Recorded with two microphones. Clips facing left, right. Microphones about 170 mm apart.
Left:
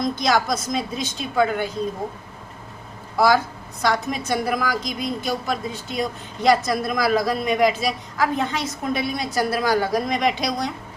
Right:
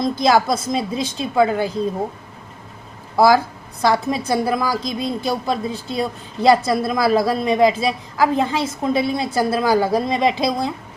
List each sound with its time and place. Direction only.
0.0 s a woman's voice: 30° right (ahead or behind)
3.8 s a woman's voice: 30° right (ahead or behind)